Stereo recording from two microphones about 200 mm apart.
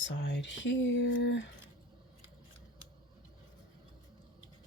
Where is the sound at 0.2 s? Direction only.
60° left (ahead or behind).